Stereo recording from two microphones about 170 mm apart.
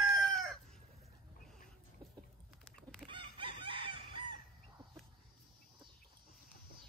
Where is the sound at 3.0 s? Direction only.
30° right (ahead or behind).